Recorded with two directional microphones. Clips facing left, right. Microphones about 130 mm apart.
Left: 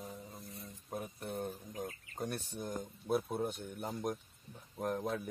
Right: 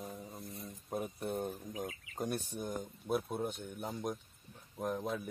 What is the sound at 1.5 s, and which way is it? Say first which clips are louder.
Speech: right 1 dB; 5° right (ahead or behind).